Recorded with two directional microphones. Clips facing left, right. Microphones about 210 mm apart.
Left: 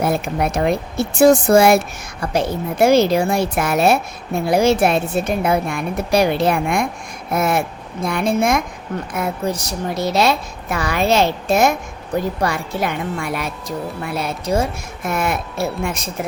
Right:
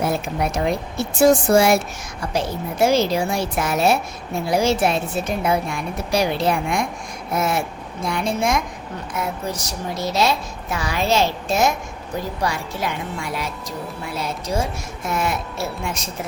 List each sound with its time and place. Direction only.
0.0 s a woman's voice: 60° left (ahead or behind)